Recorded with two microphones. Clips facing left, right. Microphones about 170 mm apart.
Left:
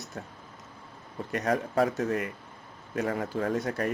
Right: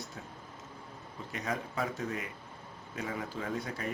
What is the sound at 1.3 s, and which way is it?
Speech, 65° left (ahead or behind).